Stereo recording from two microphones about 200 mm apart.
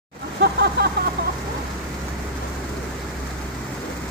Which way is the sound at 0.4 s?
55° right (ahead or behind).